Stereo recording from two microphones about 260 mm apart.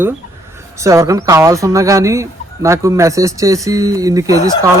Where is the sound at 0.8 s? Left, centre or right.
Centre.